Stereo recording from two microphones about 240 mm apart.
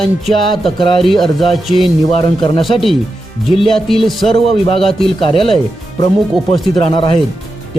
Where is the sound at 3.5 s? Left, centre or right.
Centre.